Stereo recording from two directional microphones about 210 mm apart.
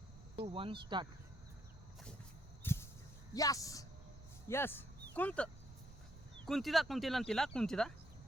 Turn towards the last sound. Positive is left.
turn(degrees=5)  # may be behind; listen again after turning